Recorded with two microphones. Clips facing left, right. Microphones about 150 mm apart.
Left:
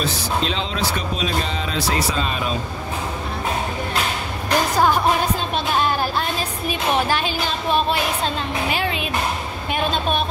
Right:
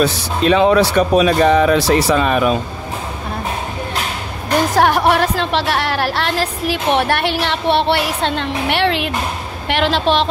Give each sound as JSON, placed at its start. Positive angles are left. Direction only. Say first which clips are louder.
{"t": 0.0, "sound": "a woman's voice", "louder": "right 7 dB", "side_deg": -60}
{"t": 4.7, "sound": "a woman's voice", "louder": "right 5 dB", "side_deg": -75}
{"t": 9.7, "sound": "a woman's voice", "louder": "right 6 dB", "side_deg": -85}